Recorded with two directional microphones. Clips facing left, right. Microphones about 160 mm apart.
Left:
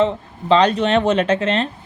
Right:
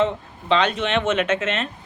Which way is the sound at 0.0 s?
35° left (ahead or behind).